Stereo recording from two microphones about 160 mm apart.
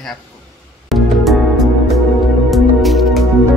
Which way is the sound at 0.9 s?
Centre (ahead or behind).